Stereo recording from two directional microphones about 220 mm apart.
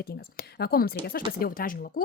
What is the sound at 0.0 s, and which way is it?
Speech, 45° left (ahead or behind).